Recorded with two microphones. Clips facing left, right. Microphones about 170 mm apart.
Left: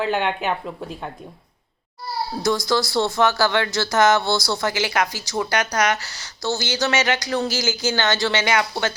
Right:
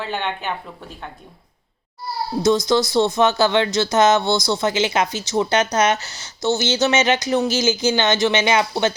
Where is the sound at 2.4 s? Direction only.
20° right (ahead or behind).